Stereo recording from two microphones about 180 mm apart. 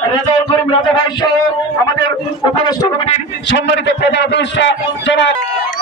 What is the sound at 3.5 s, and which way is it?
A man's voice, 75° left (ahead or behind).